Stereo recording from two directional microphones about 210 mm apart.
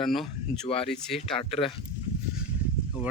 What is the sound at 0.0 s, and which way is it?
Speech, centre (ahead or behind).